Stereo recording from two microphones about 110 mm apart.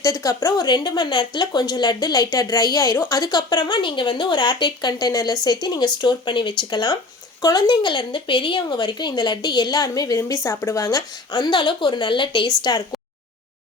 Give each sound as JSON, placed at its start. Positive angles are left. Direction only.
{"t": 0.0, "sound": "speech", "side_deg": 30}